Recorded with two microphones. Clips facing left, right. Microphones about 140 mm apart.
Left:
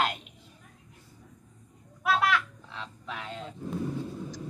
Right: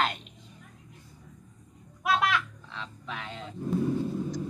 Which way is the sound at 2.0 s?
20° right (ahead or behind).